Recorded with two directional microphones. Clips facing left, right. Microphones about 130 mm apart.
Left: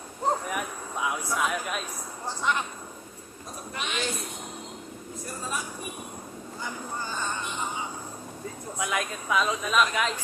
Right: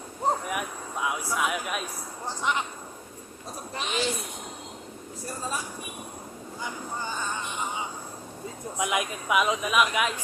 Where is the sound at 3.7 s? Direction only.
35° right (ahead or behind).